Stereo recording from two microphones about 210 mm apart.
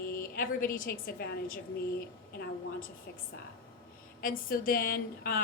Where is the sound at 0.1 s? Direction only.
45° left (ahead or behind).